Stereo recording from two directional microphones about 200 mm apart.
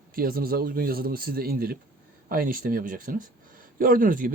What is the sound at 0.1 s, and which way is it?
Speech, 45° right (ahead or behind).